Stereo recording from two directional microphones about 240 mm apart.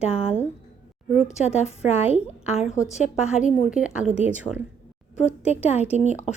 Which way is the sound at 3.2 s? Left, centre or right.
Centre.